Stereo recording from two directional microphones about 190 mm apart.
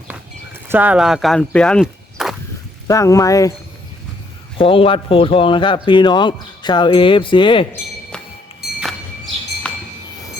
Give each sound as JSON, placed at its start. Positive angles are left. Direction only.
{"t": 0.7, "sound": "speech", "side_deg": -10}
{"t": 2.8, "sound": "speech", "side_deg": 15}
{"t": 4.5, "sound": "a man's voice", "side_deg": 30}